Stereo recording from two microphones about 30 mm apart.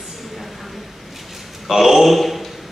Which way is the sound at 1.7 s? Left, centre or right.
Centre.